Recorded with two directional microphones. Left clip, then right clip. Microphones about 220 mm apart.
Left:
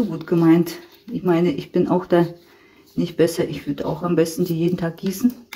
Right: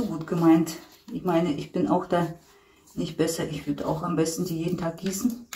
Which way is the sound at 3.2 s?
45° left (ahead or behind).